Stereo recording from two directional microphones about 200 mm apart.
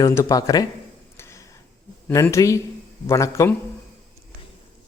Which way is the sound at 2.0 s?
10° left (ahead or behind).